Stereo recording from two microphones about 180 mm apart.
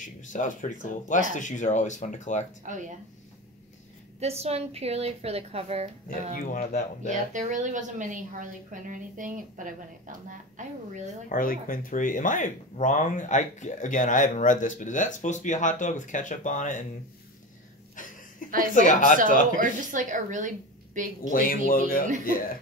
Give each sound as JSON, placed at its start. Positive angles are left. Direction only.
{"t": 0.0, "sound": "speech", "side_deg": 45}
{"t": 2.6, "sound": "a woman's voice", "side_deg": -45}
{"t": 4.2, "sound": "a woman's voice", "side_deg": -35}
{"t": 6.3, "sound": "speech", "side_deg": 45}
{"t": 7.1, "sound": "a woman's voice", "side_deg": -45}
{"t": 11.2, "sound": "speech", "side_deg": 50}
{"t": 18.4, "sound": "a sound", "side_deg": 45}
{"t": 18.8, "sound": "speech", "side_deg": 45}
{"t": 19.6, "sound": "a woman's voice", "side_deg": -45}
{"t": 21.3, "sound": "speech", "side_deg": 50}